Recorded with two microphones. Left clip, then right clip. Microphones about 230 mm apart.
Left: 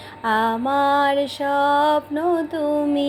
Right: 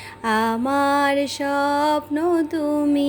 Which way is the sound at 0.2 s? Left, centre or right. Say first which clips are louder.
Left 1 dB; right.